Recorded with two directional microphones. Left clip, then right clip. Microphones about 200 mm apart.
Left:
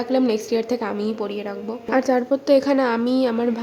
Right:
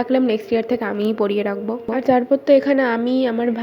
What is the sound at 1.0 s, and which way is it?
Speech, 20° right (ahead or behind).